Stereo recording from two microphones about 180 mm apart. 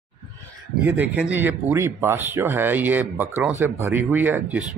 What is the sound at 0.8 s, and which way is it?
Speech, 10° right (ahead or behind).